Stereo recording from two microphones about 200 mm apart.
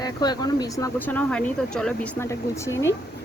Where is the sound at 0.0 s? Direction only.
20° left (ahead or behind).